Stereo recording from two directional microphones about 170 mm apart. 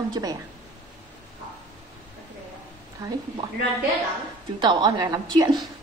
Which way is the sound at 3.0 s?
20° right (ahead or behind).